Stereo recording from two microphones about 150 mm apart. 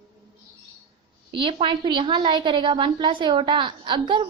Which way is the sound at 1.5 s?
35° right (ahead or behind).